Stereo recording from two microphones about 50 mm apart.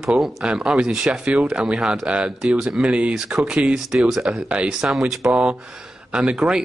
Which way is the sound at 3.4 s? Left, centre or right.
Right.